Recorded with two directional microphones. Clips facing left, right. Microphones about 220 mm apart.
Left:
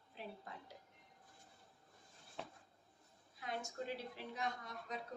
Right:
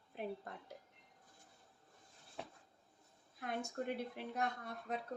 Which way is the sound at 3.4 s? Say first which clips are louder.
Right 3 dB; 55° right (ahead or behind).